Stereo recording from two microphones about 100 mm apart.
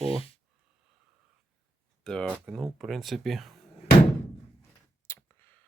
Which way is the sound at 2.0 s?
10° left (ahead or behind).